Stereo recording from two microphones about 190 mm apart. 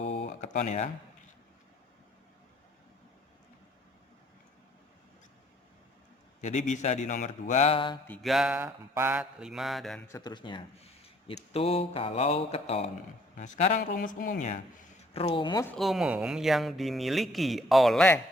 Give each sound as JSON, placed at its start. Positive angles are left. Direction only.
{"t": 0.3, "sound": "a sound", "side_deg": 40}
{"t": 6.4, "sound": "speech", "side_deg": 40}
{"t": 8.0, "sound": "speech", "side_deg": 5}
{"t": 10.1, "sound": "speech", "side_deg": 20}
{"t": 15.1, "sound": "speech", "side_deg": 30}
{"t": 15.6, "sound": "speech", "side_deg": 5}